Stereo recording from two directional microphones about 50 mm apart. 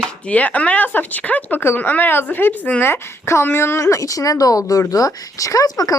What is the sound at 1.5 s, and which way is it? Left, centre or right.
Speech, left.